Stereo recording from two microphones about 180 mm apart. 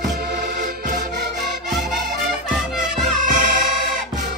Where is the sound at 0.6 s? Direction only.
50° right (ahead or behind).